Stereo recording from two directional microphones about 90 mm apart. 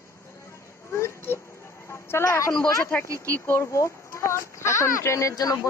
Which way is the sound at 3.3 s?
25° left (ahead or behind).